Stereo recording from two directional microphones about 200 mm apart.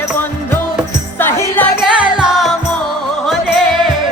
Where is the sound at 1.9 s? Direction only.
5° right (ahead or behind).